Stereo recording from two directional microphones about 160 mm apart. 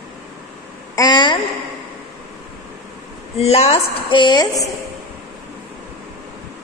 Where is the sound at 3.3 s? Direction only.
40° left (ahead or behind).